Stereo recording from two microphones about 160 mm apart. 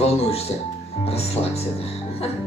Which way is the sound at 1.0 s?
40° left (ahead or behind).